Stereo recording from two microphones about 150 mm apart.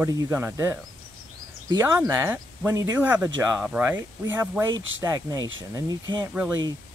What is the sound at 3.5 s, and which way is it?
Speech, 5° right (ahead or behind).